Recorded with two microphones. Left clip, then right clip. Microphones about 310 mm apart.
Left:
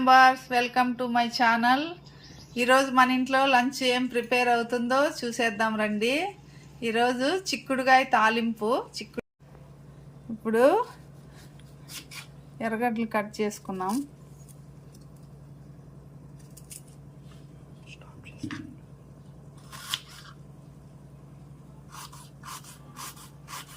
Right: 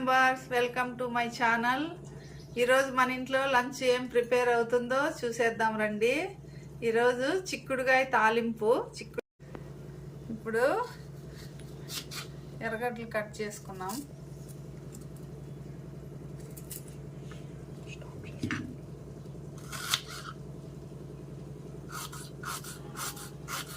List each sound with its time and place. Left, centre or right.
0.0 s speech: centre
10.4 s a woman's voice: left
12.5 s a woman's voice: left